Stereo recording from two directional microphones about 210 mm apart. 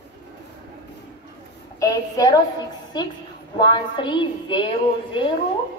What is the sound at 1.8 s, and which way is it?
Speech, 15° left (ahead or behind).